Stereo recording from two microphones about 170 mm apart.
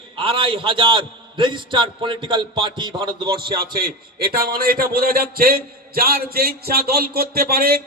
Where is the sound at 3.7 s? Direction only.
60° right (ahead or behind).